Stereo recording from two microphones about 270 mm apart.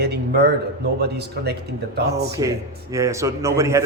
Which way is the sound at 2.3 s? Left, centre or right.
Centre.